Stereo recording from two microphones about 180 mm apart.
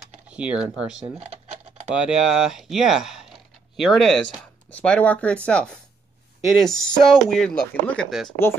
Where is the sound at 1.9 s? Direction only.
Centre (ahead or behind).